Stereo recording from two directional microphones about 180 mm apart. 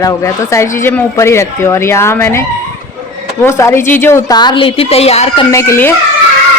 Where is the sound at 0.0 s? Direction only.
15° left (ahead or behind).